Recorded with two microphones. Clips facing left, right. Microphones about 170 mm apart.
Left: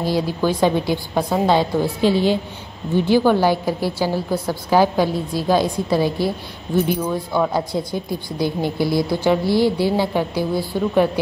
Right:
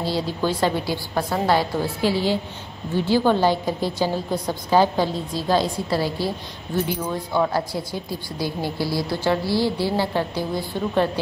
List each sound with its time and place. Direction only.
0.0 s speech: 15° left (ahead or behind)
7.5 s speech: 20° left (ahead or behind)